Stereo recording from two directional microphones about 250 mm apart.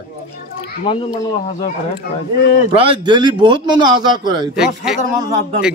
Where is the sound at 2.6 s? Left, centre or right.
Centre.